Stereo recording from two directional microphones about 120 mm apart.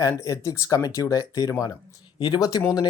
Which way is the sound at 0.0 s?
30° left (ahead or behind).